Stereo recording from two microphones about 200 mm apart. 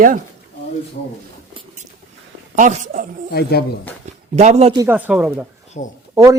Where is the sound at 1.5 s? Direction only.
35° right (ahead or behind).